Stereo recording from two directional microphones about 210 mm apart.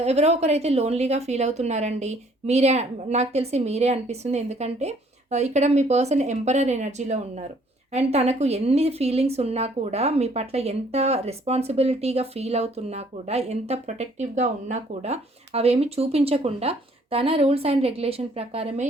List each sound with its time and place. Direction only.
0.0 s a woman's voice: 30° right (ahead or behind)